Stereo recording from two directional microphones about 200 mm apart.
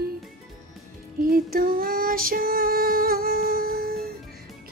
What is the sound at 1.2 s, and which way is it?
Music, 45° right (ahead or behind).